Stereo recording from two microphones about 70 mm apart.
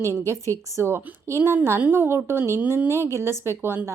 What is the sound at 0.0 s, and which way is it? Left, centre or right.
Speech, left.